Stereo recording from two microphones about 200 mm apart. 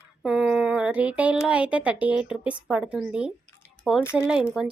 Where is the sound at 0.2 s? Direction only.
5° right (ahead or behind).